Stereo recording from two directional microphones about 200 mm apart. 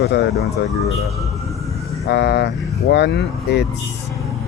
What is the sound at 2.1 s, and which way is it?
Speech, 55° left (ahead or behind).